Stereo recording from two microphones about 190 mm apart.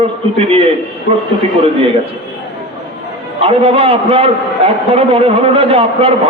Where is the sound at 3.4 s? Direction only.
30° right (ahead or behind).